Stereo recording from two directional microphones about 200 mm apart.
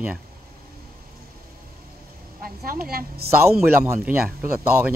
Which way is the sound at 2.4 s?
45° right (ahead or behind).